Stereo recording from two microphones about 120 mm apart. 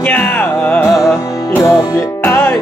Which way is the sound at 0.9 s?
Centre (ahead or behind).